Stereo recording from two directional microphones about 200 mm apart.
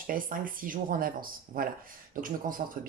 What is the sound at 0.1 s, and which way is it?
Speech, 45° right (ahead or behind).